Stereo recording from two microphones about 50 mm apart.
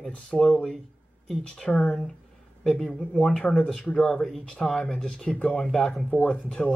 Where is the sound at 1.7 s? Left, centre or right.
Left.